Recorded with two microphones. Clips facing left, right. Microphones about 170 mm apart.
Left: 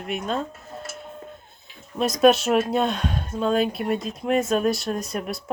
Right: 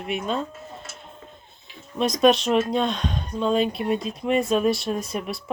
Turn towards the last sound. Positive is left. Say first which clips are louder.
# even
turn(degrees=0)  # may be behind; listen again after turning